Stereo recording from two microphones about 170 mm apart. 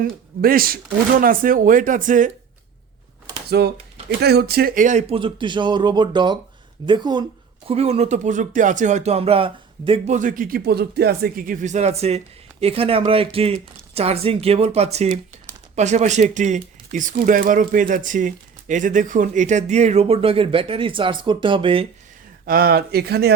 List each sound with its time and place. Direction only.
0.0 s speech: 60° right (ahead or behind)
3.6 s speech: 70° right (ahead or behind); by 7.3 s 25° right (ahead or behind)
7.7 s speech: 40° right (ahead or behind)
10.2 s speech: 50° right (ahead or behind); by 21.8 s 30° right (ahead or behind)
22.4 s speech: 60° right (ahead or behind)